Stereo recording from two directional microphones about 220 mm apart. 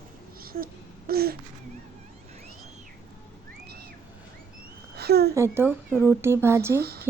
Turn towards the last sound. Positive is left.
turn(degrees=-45)  # may be behind; listen again after turning